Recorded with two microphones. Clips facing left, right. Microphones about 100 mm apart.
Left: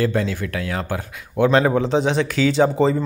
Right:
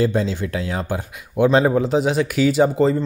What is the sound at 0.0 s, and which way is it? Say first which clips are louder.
Speech: right 1 dB; 20° right (ahead or behind).